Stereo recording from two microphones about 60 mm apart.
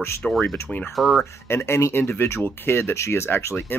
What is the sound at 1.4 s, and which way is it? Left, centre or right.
Speech, left.